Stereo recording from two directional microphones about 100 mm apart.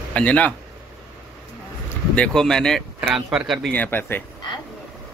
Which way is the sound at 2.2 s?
5° left (ahead or behind).